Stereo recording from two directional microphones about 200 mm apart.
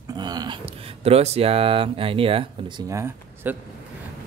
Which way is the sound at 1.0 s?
30° right (ahead or behind).